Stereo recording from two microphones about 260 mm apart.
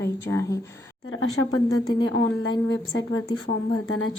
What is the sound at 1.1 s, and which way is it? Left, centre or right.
Speech, left.